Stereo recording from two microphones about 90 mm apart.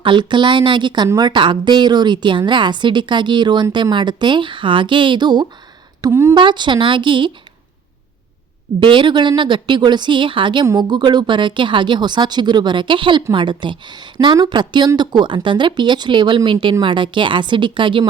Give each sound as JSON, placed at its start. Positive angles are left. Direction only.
{"t": 0.0, "sound": "speech", "side_deg": -60}
{"t": 6.1, "sound": "a woman's voice", "side_deg": -30}
{"t": 6.3, "sound": "speech", "side_deg": -55}
{"t": 8.8, "sound": "speech", "side_deg": -60}
{"t": 10.8, "sound": "speech", "side_deg": -55}